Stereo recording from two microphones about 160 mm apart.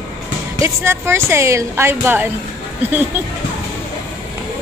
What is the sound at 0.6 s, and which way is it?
A woman's voice, 15° right (ahead or behind).